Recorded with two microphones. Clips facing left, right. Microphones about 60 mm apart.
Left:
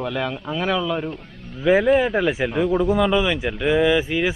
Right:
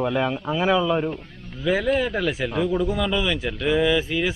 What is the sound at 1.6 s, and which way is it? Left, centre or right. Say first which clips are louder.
A man's voice: left 5 dB; left.